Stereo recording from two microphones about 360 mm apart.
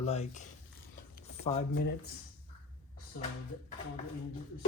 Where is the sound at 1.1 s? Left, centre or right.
Left.